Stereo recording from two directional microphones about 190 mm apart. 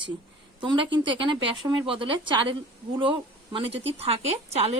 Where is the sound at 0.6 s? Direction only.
25° right (ahead or behind).